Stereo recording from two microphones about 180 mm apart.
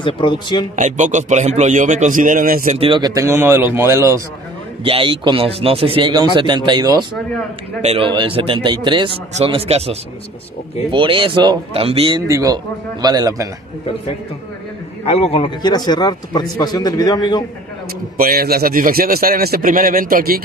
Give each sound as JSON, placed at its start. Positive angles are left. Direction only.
{"t": 0.0, "sound": "a man's voice", "side_deg": 25}
{"t": 0.7, "sound": "a man's voice", "side_deg": -45}
{"t": 2.9, "sound": "speech", "side_deg": -20}
{"t": 4.8, "sound": "a man's voice", "side_deg": -30}
{"t": 12.3, "sound": "speech", "side_deg": -15}
{"t": 15.0, "sound": "a man's voice", "side_deg": 35}
{"t": 18.1, "sound": "a man's voice", "side_deg": -55}